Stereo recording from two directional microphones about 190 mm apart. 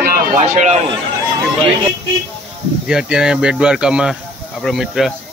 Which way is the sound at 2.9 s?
5° right (ahead or behind).